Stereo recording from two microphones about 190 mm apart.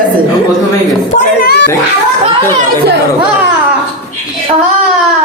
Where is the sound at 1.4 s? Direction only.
55° left (ahead or behind).